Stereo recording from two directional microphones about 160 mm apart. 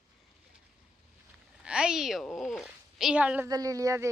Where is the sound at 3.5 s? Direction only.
20° right (ahead or behind).